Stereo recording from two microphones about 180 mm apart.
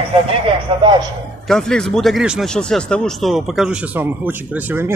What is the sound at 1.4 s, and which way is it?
Speech, 5° left (ahead or behind).